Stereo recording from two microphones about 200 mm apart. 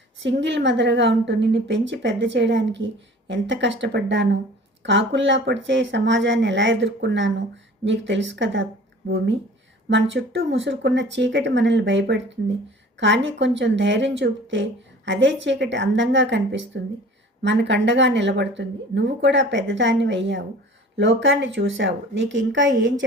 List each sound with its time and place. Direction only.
0.2 s speech: 60° right (ahead or behind)